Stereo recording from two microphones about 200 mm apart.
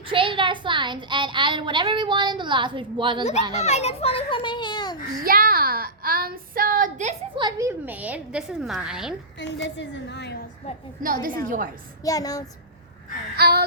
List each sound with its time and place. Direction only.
0.1 s speech: 25° right (ahead or behind)
3.5 s a child's voice: 35° left (ahead or behind)
5.2 s a woman's voice: 45° right (ahead or behind)
7.3 s speech: 20° right (ahead or behind)
7.7 s a woman's voice: 10° right (ahead or behind)
9.4 s a woman's voice: 60° left (ahead or behind)
11.0 s a woman's voice: 45° right (ahead or behind)
12.0 s speech: 20° left (ahead or behind)
13.3 s a woman's voice: 50° right (ahead or behind)